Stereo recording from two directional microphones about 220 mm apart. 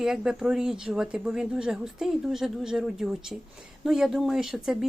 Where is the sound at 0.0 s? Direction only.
Centre (ahead or behind).